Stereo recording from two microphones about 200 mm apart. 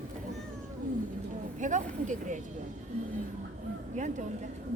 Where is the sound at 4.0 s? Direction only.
40° right (ahead or behind).